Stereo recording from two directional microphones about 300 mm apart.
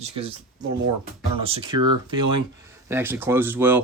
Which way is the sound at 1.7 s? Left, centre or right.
Right.